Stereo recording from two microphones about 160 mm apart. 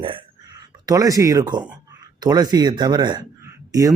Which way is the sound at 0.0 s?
30° right (ahead or behind).